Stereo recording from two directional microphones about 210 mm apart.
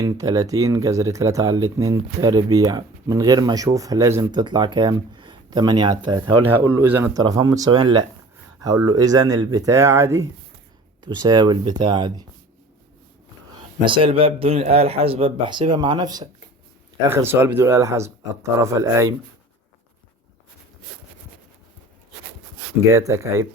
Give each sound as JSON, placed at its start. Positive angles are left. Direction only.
{"t": 0.0, "sound": "speech", "side_deg": -15}
{"t": 6.4, "sound": "speech", "side_deg": -10}
{"t": 13.8, "sound": "speech", "side_deg": -25}
{"t": 22.9, "sound": "speech", "side_deg": -15}